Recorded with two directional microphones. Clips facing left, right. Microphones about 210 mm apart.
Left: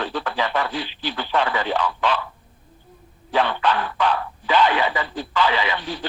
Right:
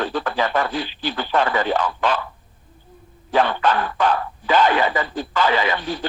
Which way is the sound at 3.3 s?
45° right (ahead or behind).